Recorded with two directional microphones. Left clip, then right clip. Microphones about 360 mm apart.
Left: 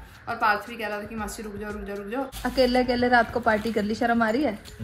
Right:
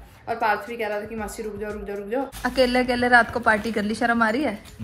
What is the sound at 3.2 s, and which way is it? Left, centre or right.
A woman's voice, right.